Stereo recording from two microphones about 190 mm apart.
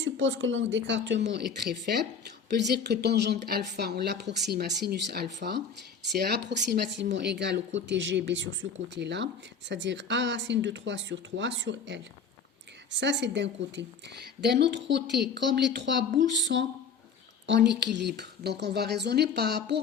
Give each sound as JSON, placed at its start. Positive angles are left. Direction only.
{"t": 0.0, "sound": "speech", "side_deg": -80}
{"t": 2.5, "sound": "speech", "side_deg": -60}
{"t": 13.0, "sound": "speech", "side_deg": -65}